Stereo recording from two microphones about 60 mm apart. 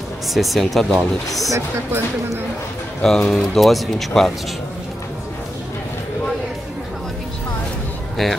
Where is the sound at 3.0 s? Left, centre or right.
Centre.